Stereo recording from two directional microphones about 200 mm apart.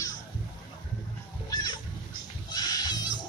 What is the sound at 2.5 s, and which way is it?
Goat, 20° left (ahead or behind).